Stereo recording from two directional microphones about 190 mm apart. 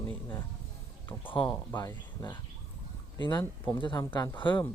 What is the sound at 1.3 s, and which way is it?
Speech, 25° left (ahead or behind).